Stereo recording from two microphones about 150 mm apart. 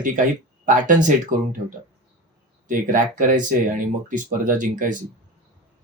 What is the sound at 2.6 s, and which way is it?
Speech, 65° right (ahead or behind).